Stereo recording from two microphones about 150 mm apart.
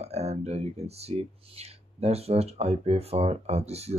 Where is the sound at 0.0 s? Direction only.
45° right (ahead or behind).